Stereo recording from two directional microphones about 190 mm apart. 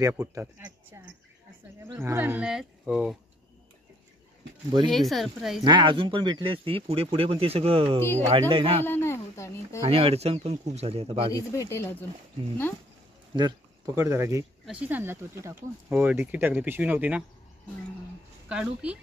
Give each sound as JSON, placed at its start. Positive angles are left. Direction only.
{"t": 0.0, "sound": "speech", "side_deg": -15}
{"t": 4.9, "sound": "speech", "side_deg": 0}
{"t": 5.6, "sound": "speech", "side_deg": -25}
{"t": 8.8, "sound": "speech", "side_deg": 10}
{"t": 9.8, "sound": "speech", "side_deg": -30}
{"t": 11.3, "sound": "speech", "side_deg": 15}
{"t": 13.3, "sound": "speech", "side_deg": -20}
{"t": 18.5, "sound": "speech", "side_deg": -5}